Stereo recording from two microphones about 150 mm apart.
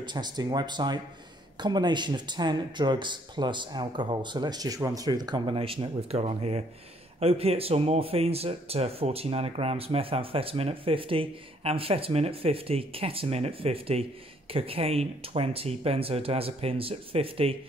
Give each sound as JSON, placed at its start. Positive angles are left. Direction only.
{"t": 0.0, "sound": "speech", "side_deg": -30}